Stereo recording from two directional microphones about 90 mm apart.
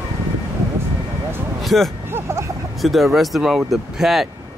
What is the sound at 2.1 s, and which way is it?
Vehicle, 30° right (ahead or behind).